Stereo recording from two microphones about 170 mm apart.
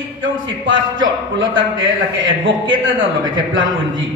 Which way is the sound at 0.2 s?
90° right.